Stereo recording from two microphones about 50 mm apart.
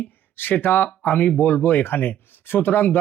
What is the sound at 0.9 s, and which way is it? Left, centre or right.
Speech, left.